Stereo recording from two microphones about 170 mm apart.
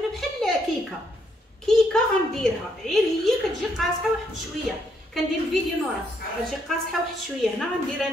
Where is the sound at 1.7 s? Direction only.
5° left (ahead or behind).